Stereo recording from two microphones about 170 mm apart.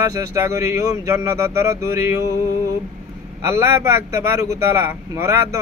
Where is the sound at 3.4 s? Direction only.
15° right (ahead or behind).